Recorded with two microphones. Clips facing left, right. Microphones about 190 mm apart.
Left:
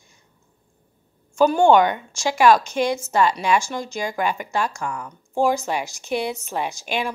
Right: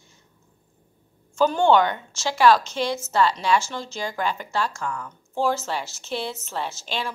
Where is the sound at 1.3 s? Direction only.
10° left (ahead or behind).